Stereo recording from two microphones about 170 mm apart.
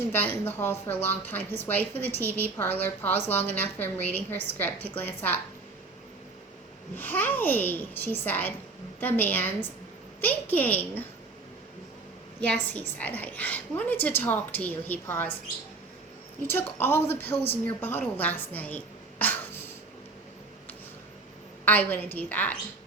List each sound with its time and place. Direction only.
0.1 s a woman's voice: 10° left (ahead or behind)
6.9 s a woman's voice: 10° left (ahead or behind)
12.4 s a woman's voice: 10° left (ahead or behind)
16.5 s a woman's voice: 15° left (ahead or behind)
19.2 s a sound: 10° left (ahead or behind)
21.6 s a woman's voice: 10° left (ahead or behind)